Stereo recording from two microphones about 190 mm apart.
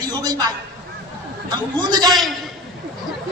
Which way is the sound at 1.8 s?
20° right (ahead or behind).